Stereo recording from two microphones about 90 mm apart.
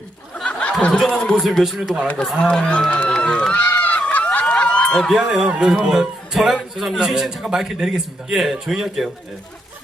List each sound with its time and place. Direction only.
0.3 s snicker: 10° left (ahead or behind)
1.0 s a man's voice: centre (ahead or behind)
3.2 s run: 10° left (ahead or behind)
5.2 s a man's voice: 10° right (ahead or behind)